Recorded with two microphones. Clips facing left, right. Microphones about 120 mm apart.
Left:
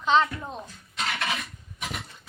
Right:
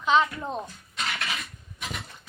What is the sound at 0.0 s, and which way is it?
Speech, 5° right (ahead or behind).